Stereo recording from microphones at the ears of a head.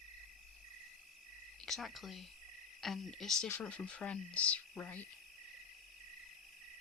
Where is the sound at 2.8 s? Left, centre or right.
Left.